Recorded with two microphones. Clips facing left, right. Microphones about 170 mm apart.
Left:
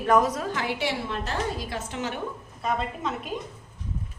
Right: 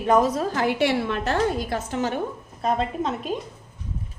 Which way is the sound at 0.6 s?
65° right (ahead or behind).